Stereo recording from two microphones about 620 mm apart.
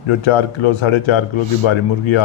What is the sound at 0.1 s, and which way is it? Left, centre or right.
A man's voice, left.